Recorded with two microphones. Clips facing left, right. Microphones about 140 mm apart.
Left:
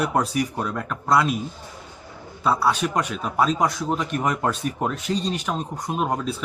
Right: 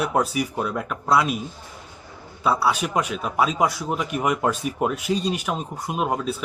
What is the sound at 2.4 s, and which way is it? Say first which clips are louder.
A man's voice: even; 5° right (ahead or behind).